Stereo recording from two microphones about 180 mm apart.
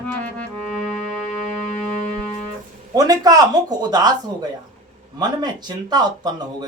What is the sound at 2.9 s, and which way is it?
Speech, 20° right (ahead or behind).